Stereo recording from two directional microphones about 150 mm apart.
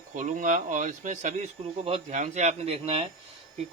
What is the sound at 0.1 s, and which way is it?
Speech, 60° right (ahead or behind).